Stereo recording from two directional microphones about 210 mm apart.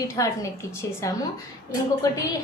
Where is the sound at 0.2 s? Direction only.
15° left (ahead or behind).